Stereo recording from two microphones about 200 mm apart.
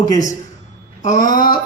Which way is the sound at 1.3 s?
45° left (ahead or behind).